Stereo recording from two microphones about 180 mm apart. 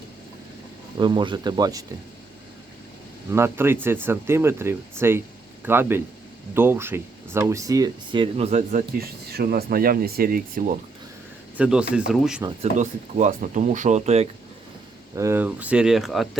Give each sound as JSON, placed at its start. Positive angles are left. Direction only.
{"t": 0.9, "sound": "speech", "side_deg": -25}
{"t": 3.3, "sound": "speech", "side_deg": -15}
{"t": 9.0, "sound": "speech", "side_deg": -55}
{"t": 11.5, "sound": "speech", "side_deg": -5}
{"t": 12.7, "sound": "speech", "side_deg": -45}
{"t": 15.1, "sound": "speech", "side_deg": -15}